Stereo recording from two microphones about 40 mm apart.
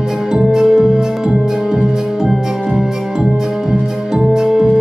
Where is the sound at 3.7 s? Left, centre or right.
Centre.